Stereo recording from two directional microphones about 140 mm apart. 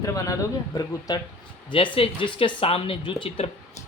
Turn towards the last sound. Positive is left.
turn(degrees=40)  # may be behind; listen again after turning